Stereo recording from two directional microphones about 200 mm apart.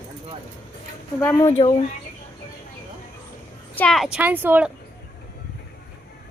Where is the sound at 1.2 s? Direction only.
15° left (ahead or behind).